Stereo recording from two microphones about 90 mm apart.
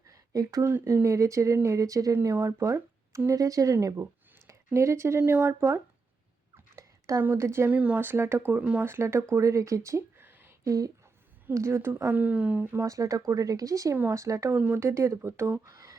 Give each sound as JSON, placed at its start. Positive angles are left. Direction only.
{"t": 0.1, "sound": "a sound", "side_deg": -40}
{"t": 0.7, "sound": "speech", "side_deg": -25}
{"t": 7.2, "sound": "speech", "side_deg": -25}
{"t": 7.7, "sound": "speech", "side_deg": -15}
{"t": 10.6, "sound": "speech", "side_deg": -40}
{"t": 12.9, "sound": "speech", "side_deg": -40}
{"t": 14.5, "sound": "speech", "side_deg": -20}
{"t": 15.6, "sound": "speech", "side_deg": -40}